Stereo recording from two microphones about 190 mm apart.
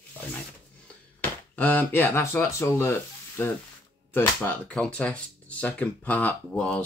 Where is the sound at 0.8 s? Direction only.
10° left (ahead or behind).